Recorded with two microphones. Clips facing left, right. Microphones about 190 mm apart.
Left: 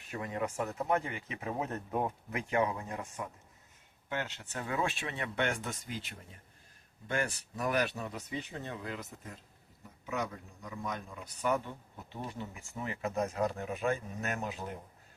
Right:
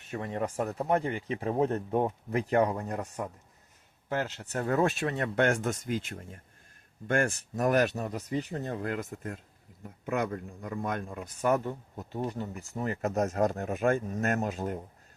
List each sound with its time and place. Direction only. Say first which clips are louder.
0.1 s speech: right 3 dB; 30° right (ahead or behind); by 14.8 s 45° right (ahead or behind)